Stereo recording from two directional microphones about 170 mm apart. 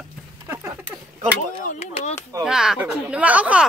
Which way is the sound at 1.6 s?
45° left (ahead or behind).